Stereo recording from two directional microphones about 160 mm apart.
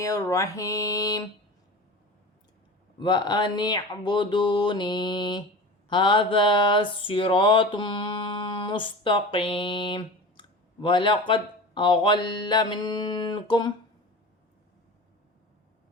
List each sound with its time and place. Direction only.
0.0 s speech: 20° left (ahead or behind)
3.0 s speech: 30° left (ahead or behind)
5.9 s a sound: 30° left (ahead or behind)